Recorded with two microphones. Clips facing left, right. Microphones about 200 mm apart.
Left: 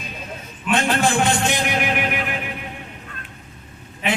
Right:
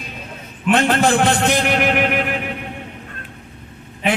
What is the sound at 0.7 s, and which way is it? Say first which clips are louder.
Speech: right 4 dB; 55° right (ahead or behind).